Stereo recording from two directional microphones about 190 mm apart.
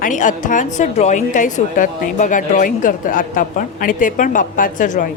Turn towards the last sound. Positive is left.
turn(degrees=45)  # may be behind; listen again after turning